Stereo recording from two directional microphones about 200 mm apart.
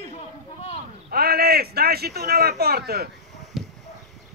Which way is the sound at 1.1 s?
50° right (ahead or behind).